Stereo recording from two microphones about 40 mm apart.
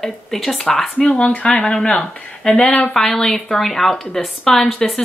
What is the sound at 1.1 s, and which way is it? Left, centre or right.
Speech, left.